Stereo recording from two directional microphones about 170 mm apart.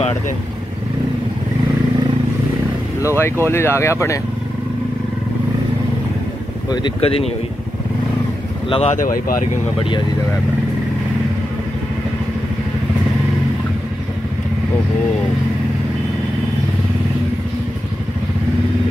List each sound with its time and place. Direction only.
3.2 s speech: 15° left (ahead or behind)
6.7 s speech: 30° left (ahead or behind)
8.6 s speech: 30° left (ahead or behind)
8.9 s speech: 55° left (ahead or behind)